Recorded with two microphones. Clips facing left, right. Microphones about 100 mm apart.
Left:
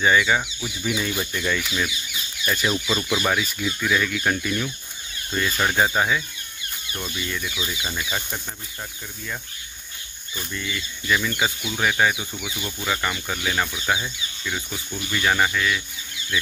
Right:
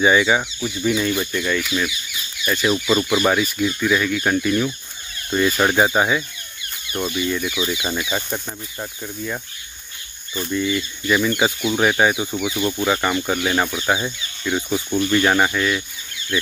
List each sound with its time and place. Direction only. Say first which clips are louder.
0.0 s speech: right 3 dB; 15° right (ahead or behind)
0.6 s speech: right 6 dB; 5° left (ahead or behind)
2.9 s speech: right 7 dB; 20° right (ahead or behind)
5.3 s speech: right 6 dB; 25° right (ahead or behind)
10.5 s speech: right 11 dB; 20° right (ahead or behind); by 12.8 s 40° right (ahead or behind)
12.8 s speech: right 5 dB; 30° right (ahead or behind)
14.9 s speech: right 6 dB; 40° right (ahead or behind)